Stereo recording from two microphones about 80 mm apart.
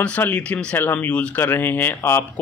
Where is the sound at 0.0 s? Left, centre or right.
Centre.